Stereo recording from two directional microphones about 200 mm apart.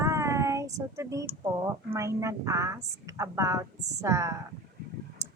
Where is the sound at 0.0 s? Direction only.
15° right (ahead or behind).